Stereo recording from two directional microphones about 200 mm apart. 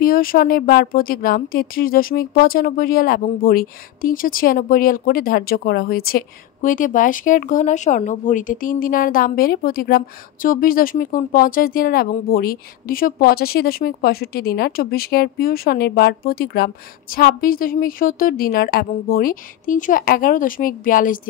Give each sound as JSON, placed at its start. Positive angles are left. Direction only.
{"t": 0.0, "sound": "speech", "side_deg": 45}